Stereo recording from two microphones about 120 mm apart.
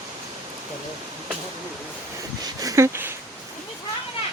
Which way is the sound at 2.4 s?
30° right (ahead or behind).